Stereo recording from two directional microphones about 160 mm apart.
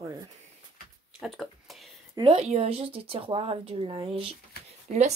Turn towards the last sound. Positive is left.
turn(degrees=-45)  # may be behind; listen again after turning